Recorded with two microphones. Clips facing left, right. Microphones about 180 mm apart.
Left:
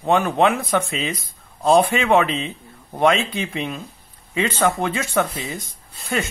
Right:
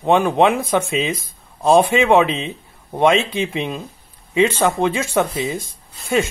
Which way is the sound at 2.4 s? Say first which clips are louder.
Right 2 dB; 20° right (ahead or behind).